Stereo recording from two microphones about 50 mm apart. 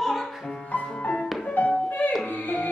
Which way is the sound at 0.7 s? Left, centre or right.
Left.